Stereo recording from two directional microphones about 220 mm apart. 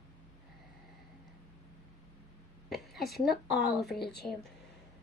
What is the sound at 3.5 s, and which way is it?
Speech, 50° left (ahead or behind).